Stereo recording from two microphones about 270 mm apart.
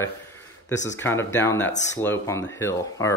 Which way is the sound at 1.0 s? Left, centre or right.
Centre.